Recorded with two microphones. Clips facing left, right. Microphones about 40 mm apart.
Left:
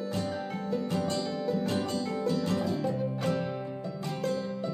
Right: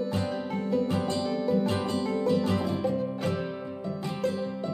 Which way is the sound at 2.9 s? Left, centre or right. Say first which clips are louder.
Right 1 dB; centre.